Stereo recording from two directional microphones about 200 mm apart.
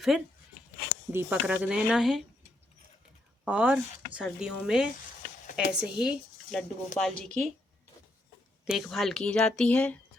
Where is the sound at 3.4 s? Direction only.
5° right (ahead or behind).